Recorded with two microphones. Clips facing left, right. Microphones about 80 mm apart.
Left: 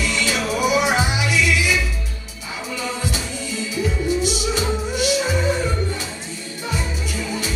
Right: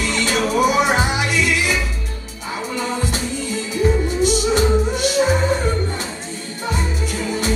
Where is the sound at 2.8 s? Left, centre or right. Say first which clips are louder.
Right 2 dB; right.